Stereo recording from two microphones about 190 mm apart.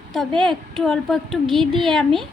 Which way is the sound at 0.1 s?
Centre (ahead or behind).